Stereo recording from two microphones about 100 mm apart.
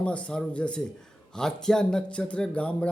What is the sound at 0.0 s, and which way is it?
Speech, 10° left (ahead or behind).